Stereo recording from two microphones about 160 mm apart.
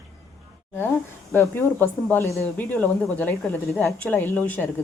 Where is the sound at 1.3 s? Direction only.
15° left (ahead or behind).